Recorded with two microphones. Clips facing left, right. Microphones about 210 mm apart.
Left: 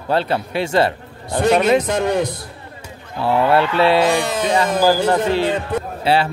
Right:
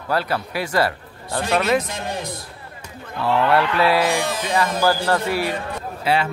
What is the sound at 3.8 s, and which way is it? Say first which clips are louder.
A man's voice: left 4 dB; 25° left (ahead or behind).